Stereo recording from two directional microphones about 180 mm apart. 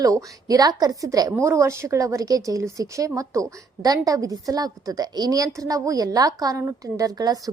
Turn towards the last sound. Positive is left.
turn(degrees=-20)  # may be behind; listen again after turning